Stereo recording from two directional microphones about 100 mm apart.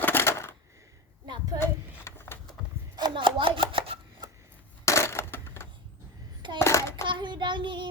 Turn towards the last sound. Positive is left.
turn(degrees=-50)  # may be behind; listen again after turning